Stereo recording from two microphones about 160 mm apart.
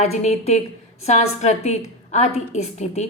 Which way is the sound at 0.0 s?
45° left (ahead or behind).